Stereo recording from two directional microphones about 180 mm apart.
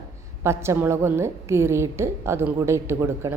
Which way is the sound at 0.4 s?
15° right (ahead or behind).